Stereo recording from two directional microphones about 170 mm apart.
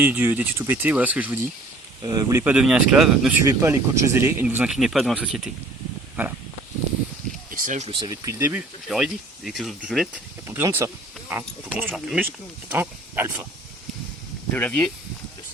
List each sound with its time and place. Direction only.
0.0 s speech: 10° right (ahead or behind)
2.0 s speech: 20° right (ahead or behind)
2.4 s speech: 5° right (ahead or behind)
3.4 s speech: 15° right (ahead or behind)
7.5 s a sound: 50° right (ahead or behind)
7.9 s speech: 25° right (ahead or behind)
8.9 s speech: 5° right (ahead or behind)
10.4 s speech: 15° right (ahead or behind)
14.5 s speech: 10° left (ahead or behind)